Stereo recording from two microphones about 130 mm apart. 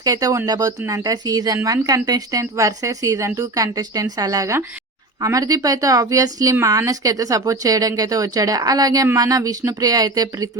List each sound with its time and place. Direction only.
0.0 s speech: 30° right (ahead or behind)